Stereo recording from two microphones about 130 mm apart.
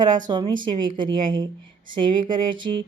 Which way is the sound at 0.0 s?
35° right (ahead or behind).